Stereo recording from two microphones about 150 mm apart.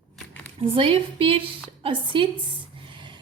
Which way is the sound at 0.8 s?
40° right (ahead or behind).